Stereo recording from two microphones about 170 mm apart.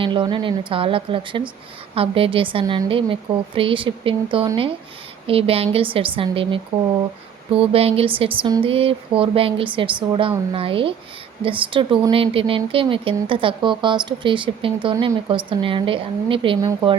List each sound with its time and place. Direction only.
0.0 s a woman's voice: 30° right (ahead or behind)